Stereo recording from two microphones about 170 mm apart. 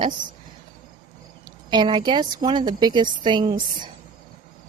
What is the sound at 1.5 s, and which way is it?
A woman's voice, 25° right (ahead or behind).